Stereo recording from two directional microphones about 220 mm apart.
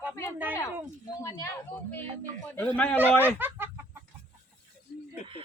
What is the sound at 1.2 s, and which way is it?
A man's voice, 15° left (ahead or behind).